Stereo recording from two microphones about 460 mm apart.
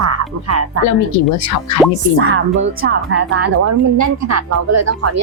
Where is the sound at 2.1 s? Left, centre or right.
Right.